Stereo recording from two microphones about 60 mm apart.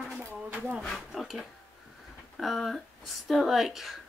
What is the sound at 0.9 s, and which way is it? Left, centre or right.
Speech, centre.